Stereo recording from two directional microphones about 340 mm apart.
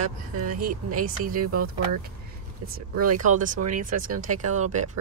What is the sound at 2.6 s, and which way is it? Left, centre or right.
Speech, right.